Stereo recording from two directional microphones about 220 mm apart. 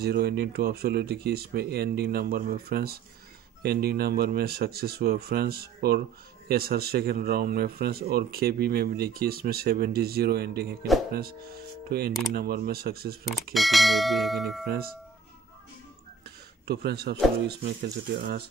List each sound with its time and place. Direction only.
0.0 s speech: 45° right (ahead or behind)
13.5 s speech: centre (ahead or behind)
16.3 s a sound: 50° right (ahead or behind)
17.5 s speech: 45° right (ahead or behind)